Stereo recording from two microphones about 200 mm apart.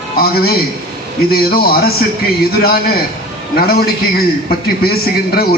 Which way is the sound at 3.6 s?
50° left (ahead or behind).